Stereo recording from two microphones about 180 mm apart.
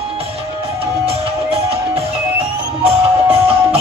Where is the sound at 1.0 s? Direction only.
35° right (ahead or behind).